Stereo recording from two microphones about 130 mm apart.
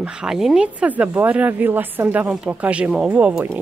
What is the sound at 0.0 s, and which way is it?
Speech, 5° right (ahead or behind).